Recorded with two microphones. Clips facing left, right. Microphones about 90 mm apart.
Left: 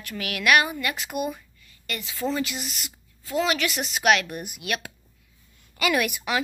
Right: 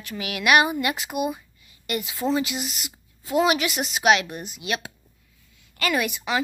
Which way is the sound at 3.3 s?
15° right (ahead or behind).